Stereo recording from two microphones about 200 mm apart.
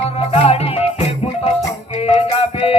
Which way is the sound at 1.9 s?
30° left (ahead or behind).